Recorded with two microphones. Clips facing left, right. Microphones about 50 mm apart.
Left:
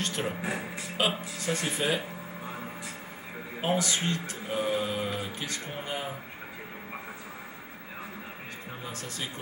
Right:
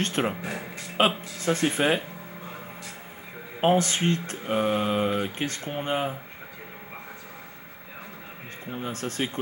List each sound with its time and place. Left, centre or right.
0.0 s speech: right
0.4 s music: centre
0.9 s speech: right
3.6 s speech: right
8.7 s speech: right